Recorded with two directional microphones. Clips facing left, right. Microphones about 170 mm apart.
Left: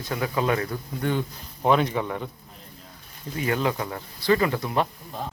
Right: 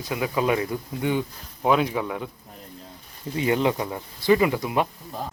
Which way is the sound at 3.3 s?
20° right (ahead or behind).